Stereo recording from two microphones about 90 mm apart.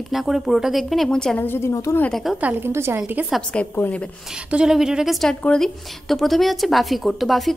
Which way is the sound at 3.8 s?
15° left (ahead or behind).